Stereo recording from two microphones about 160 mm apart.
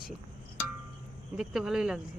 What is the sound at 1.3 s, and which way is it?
Speech, 5° right (ahead or behind).